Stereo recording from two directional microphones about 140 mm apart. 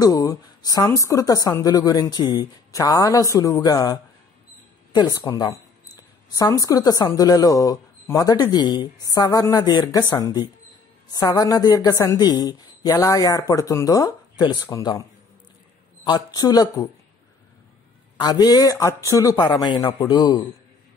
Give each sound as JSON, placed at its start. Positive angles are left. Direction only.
{"t": 0.0, "sound": "speech", "side_deg": 25}
{"t": 18.1, "sound": "speech", "side_deg": 30}